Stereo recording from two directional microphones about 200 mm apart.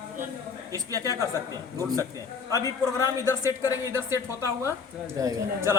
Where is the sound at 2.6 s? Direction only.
15° left (ahead or behind).